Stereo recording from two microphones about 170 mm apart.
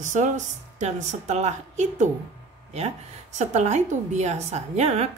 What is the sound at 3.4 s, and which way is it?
A woman's voice, 40° right (ahead or behind).